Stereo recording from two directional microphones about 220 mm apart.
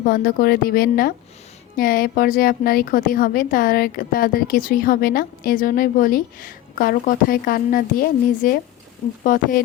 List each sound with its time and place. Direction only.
0.0 s a woman's voice: 45° left (ahead or behind)